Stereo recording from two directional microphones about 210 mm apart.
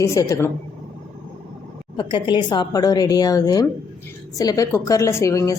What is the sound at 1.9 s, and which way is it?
A woman's voice, 20° left (ahead or behind).